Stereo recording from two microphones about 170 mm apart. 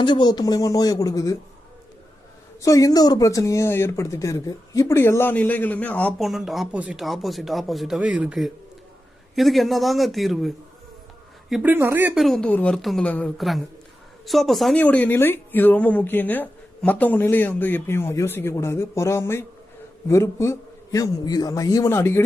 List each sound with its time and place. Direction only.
0.0 s speech: 25° left (ahead or behind)
2.6 s a woman's voice: 20° left (ahead or behind); by 11.7 s centre (ahead or behind)
11.7 s speech: 10° right (ahead or behind)
12.2 s a woman's voice: 5° left (ahead or behind)